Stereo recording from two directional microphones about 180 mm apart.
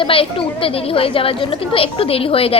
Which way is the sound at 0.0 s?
30° left (ahead or behind).